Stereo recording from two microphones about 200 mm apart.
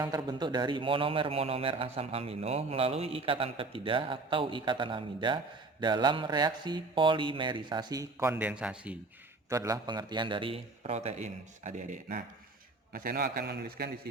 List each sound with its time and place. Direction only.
0.0 s speech: 20° right (ahead or behind)
9.5 s a man's voice: 15° right (ahead or behind); by 13.9 s 55° right (ahead or behind)